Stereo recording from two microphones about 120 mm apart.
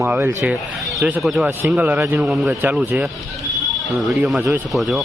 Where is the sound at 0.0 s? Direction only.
20° right (ahead or behind).